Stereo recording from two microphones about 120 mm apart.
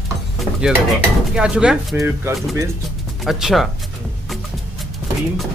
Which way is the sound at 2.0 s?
20° right (ahead or behind).